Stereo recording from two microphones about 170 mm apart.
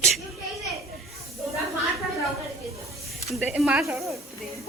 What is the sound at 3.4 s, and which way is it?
Speech, centre (ahead or behind).